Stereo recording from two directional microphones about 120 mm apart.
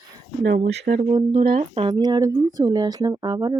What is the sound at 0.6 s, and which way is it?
Speech, 90° right.